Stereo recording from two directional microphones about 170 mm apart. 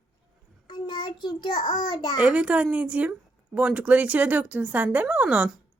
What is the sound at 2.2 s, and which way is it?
Speech, 5° right (ahead or behind).